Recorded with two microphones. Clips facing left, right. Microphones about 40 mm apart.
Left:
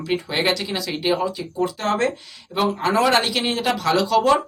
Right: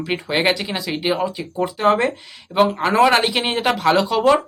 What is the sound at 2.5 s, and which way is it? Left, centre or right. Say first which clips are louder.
Speech: right 3 dB; right.